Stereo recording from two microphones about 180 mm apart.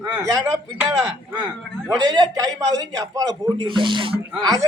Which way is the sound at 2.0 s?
20° right (ahead or behind).